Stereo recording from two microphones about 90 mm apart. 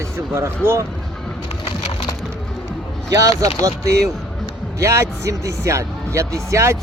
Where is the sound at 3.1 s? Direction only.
35° right (ahead or behind).